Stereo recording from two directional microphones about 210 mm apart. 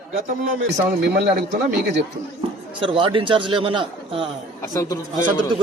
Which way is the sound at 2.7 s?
25° right (ahead or behind).